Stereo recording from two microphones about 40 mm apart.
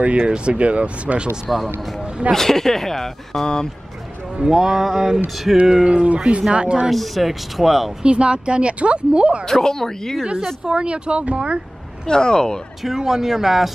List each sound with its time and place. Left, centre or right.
0.0 s speech: right
2.3 s speech: centre
4.4 s music: centre
5.9 s speech: right
6.9 s speech: centre
8.0 s speech: right
9.5 s speech: centre
10.6 s speech: right
12.1 s speech: centre
12.8 s music: centre